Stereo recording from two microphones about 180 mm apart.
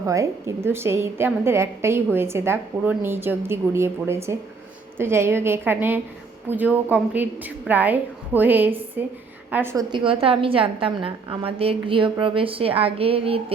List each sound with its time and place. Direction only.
0.0 s a woman's voice: 15° right (ahead or behind)
9.9 s a woman's voice: 30° right (ahead or behind)